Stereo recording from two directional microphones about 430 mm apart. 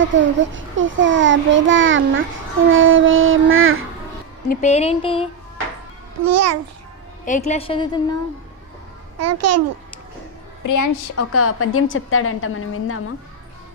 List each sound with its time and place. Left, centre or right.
0.0 s a child's voice: right
4.4 s a sound: centre
6.2 s a child's voice: right
7.3 s a sound: centre
9.1 s a child's voice: right
10.6 s a woman's voice: left